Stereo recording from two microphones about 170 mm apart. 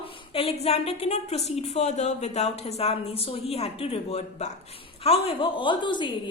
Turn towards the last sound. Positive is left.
turn(degrees=30)  # may be behind; listen again after turning